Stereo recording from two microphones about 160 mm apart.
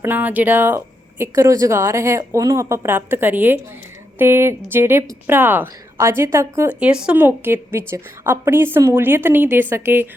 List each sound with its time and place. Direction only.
0.0 s a woman's voice: 10° right (ahead or behind)